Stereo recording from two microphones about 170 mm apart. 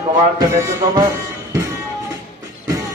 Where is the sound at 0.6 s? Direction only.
20° right (ahead or behind).